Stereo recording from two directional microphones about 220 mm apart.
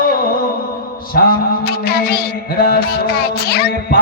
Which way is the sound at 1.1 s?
45° left (ahead or behind).